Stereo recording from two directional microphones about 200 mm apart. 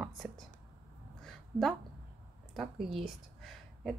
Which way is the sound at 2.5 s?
Centre (ahead or behind).